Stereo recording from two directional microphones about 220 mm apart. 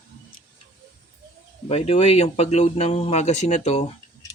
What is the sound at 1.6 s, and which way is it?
Speech, 30° left (ahead or behind).